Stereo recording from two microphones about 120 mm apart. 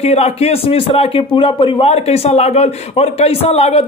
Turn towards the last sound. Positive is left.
turn(degrees=55)  # may be behind; listen again after turning